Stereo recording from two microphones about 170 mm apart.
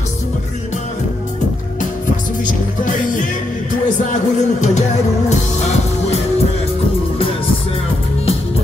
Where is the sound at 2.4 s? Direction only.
50° left (ahead or behind).